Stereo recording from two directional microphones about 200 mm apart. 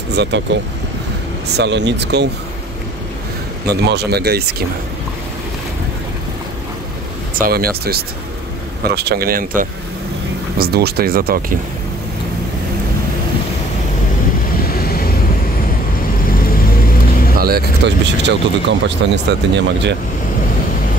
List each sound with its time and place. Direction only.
0.1 s speech: 60° right (ahead or behind)
1.6 s speech: 60° right (ahead or behind)
3.6 s speech: 55° right (ahead or behind)
7.3 s speech: 50° right (ahead or behind)
10.6 s speech: 55° right (ahead or behind)
14.7 s vehicle: 50° left (ahead or behind)
16.3 s vehicle: 45° left (ahead or behind)
17.4 s speech: 50° right (ahead or behind)